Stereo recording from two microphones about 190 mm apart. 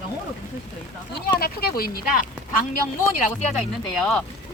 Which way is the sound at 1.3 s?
55° left (ahead or behind).